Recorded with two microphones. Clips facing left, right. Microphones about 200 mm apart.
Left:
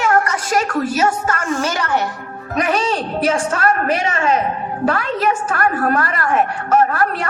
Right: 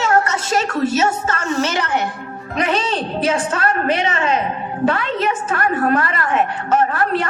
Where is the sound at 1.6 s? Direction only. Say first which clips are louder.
Even; 20° right (ahead or behind).